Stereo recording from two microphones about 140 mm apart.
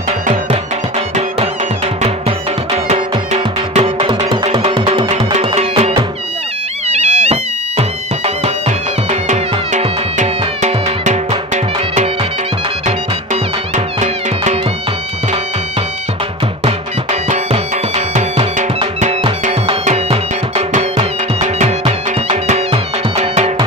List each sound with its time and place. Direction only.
0.3 s music: 55° right (ahead or behind)
2.9 s music: 50° right (ahead or behind)
16.6 s music: 50° right (ahead or behind)
19.8 s music: 50° right (ahead or behind)